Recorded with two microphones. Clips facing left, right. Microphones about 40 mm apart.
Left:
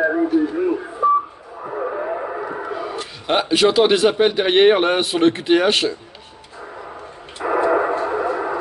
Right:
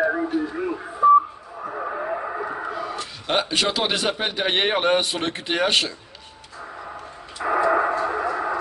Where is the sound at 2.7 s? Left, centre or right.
Centre.